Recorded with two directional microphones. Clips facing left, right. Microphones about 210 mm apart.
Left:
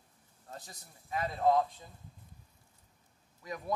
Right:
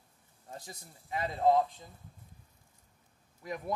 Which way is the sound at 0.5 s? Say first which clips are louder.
Right 2 dB; 20° right (ahead or behind).